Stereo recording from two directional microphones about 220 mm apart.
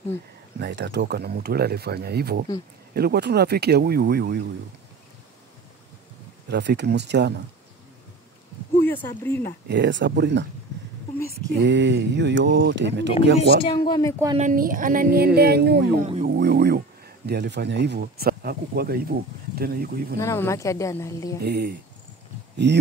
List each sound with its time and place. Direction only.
0.6 s speech: 50° right (ahead or behind)
6.5 s speech: 50° right (ahead or behind)
8.8 s a sound: 10° left (ahead or behind)
9.2 s speech: 10° left (ahead or behind)
9.7 s speech: 55° right (ahead or behind)
11.4 s speech: 55° right (ahead or behind)
13.6 s speech: 20° left (ahead or behind)
14.4 s speech: 40° right (ahead or behind)
20.2 s speech: 15° left (ahead or behind)
21.4 s speech: 50° right (ahead or behind)